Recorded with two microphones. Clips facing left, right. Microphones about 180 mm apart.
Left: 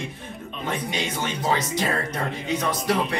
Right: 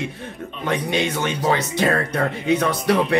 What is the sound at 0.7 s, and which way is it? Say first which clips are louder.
Speech: right 7 dB; 60° right (ahead or behind).